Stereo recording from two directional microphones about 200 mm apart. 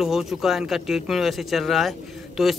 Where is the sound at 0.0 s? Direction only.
Centre (ahead or behind).